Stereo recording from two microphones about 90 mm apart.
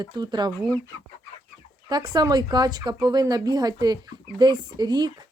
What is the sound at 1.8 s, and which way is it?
Speech, 50° right (ahead or behind).